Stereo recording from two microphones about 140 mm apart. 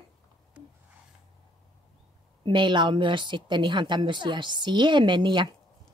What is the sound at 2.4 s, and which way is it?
A woman's voice, 35° right (ahead or behind).